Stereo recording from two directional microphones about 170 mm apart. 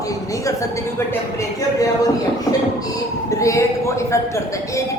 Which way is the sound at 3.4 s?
20° left (ahead or behind).